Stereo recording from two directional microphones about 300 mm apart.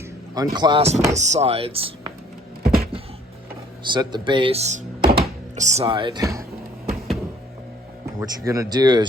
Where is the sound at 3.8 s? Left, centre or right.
Centre.